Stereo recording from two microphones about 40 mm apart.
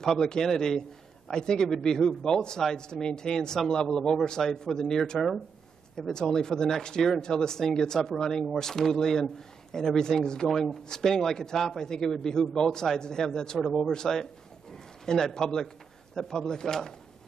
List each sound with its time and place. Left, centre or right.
0.0 s speech: centre